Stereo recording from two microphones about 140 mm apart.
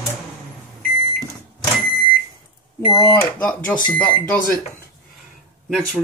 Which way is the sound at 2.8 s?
25° left (ahead or behind).